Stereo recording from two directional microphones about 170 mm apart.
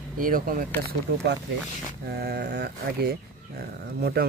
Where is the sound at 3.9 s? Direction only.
65° right (ahead or behind).